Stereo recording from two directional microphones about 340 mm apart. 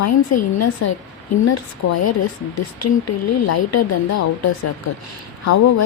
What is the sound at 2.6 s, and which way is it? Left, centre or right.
Speech, left.